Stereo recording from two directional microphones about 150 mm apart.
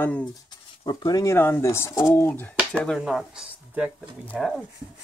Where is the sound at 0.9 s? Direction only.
25° left (ahead or behind).